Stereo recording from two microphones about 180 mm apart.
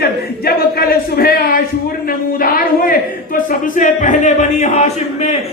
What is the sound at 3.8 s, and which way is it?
Speech, 45° left (ahead or behind).